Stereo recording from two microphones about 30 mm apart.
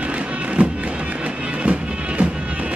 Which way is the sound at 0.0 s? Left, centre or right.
Right.